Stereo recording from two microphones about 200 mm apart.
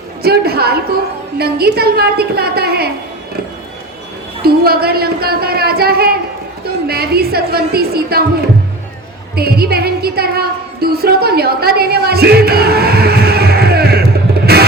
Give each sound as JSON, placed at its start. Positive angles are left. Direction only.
{"t": 0.2, "sound": "speech", "side_deg": -50}
{"t": 4.4, "sound": "speech", "side_deg": -50}
{"t": 9.3, "sound": "a woman's voice", "side_deg": -50}
{"t": 14.5, "sound": "music", "side_deg": -50}